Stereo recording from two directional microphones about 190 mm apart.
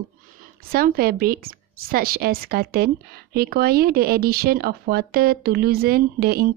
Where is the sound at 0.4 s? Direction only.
50° right (ahead or behind).